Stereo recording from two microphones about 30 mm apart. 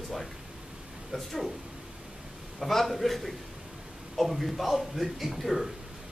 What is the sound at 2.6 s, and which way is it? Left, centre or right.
A man's voice, centre.